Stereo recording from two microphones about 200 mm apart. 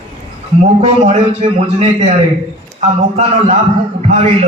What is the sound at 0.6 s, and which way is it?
A man's voice, 30° right (ahead or behind).